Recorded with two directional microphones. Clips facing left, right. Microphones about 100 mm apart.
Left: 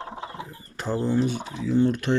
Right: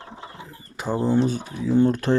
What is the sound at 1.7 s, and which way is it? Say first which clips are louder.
Speech: right 3 dB; 35° right (ahead or behind).